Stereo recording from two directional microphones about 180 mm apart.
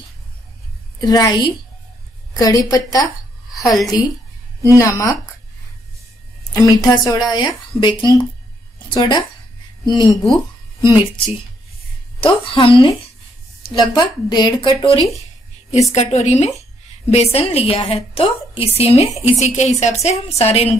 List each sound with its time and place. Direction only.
1.0 s a woman's voice: 20° left (ahead or behind)
6.5 s a woman's voice: 20° left (ahead or behind)
12.2 s a woman's voice: 30° left (ahead or behind)
15.7 s a woman's voice: 35° left (ahead or behind)